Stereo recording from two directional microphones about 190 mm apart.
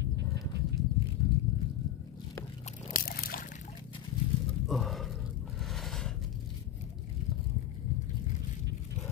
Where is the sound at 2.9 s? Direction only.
50° left (ahead or behind).